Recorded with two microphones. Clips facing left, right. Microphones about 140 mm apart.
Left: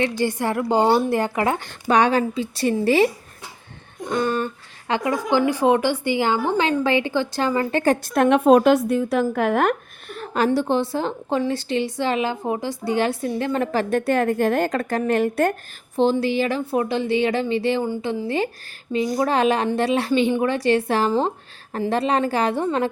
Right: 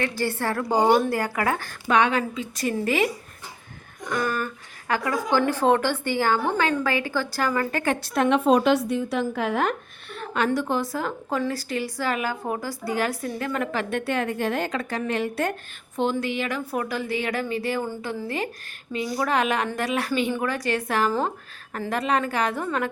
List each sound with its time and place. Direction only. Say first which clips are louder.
0.0 s speech: left 4 dB; 20° left (ahead or behind)
1.9 s a woman's voice: left 3 dB; 35° left (ahead or behind)
7.9 s a woman's voice: left 5 dB; 50° left (ahead or behind)
10.1 s a woman's voice: left 4 dB; 40° left (ahead or behind)
16.0 s speech: left 6 dB; 30° left (ahead or behind)